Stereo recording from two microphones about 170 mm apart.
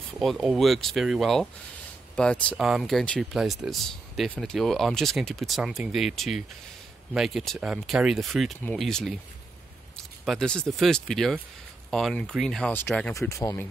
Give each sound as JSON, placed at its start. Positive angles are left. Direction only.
{"t": 0.2, "sound": "speech", "side_deg": 0}
{"t": 10.2, "sound": "speech", "side_deg": 5}